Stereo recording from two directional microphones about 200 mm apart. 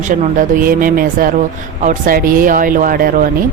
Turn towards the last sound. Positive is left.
turn(degrees=-45)  # may be behind; listen again after turning